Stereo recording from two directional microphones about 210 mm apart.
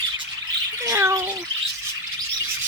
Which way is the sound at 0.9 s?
15° right (ahead or behind).